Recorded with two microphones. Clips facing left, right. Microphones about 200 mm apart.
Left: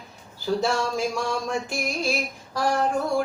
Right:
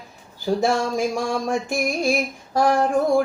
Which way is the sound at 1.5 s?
50° right (ahead or behind).